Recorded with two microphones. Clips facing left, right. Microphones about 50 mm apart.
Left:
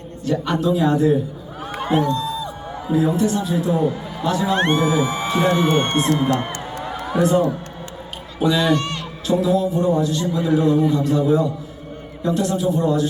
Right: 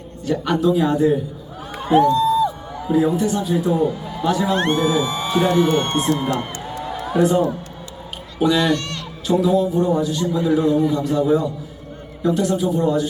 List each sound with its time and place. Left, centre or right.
0.3 s a man's voice: centre
4.5 s speech: left
6.3 s a sound: left
7.2 s a man's voice: centre
8.6 s speech: centre
9.2 s a man's voice: centre